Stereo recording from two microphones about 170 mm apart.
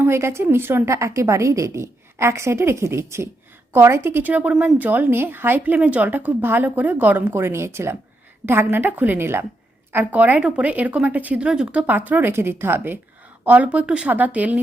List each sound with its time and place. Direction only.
0.0 s a woman's voice: 15° right (ahead or behind)